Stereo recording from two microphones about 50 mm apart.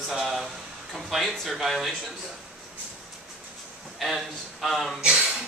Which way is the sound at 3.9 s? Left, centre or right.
Centre.